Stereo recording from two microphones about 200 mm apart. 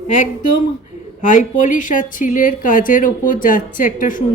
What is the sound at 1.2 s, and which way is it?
A woman's voice, 40° left (ahead or behind).